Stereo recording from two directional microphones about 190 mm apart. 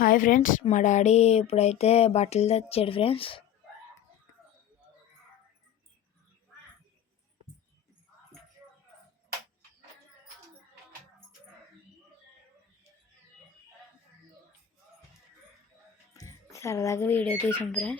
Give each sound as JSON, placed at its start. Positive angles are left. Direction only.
{"t": 0.0, "sound": "speech", "side_deg": 45}
{"t": 0.6, "sound": "a sound", "side_deg": 40}
{"t": 16.1, "sound": "music", "side_deg": 15}
{"t": 17.4, "sound": "speech", "side_deg": 10}